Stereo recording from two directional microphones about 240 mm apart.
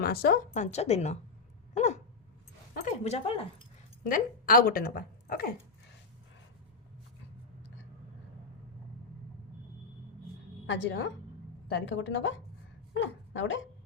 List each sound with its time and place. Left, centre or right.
0.0 s a woman's voice: left
1.7 s a sound: left
2.7 s speech: left
10.7 s a woman's voice: left